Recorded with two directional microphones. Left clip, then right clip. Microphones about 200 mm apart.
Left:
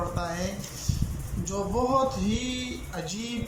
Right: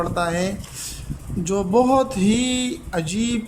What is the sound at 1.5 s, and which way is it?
A man's voice, 65° right (ahead or behind).